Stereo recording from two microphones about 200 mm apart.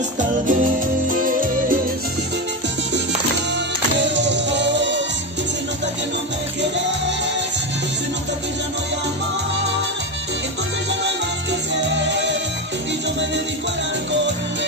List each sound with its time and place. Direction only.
0.5 s music: 40° right (ahead or behind)
3.5 s music: 65° right (ahead or behind)
11.9 s music: 65° right (ahead or behind)